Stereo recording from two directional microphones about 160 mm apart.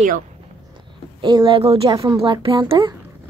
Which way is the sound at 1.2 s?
30° right (ahead or behind).